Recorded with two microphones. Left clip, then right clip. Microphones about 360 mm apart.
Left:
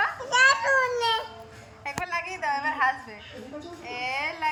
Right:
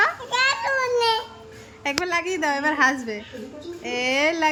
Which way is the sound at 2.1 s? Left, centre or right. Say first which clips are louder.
Right 4 dB; centre.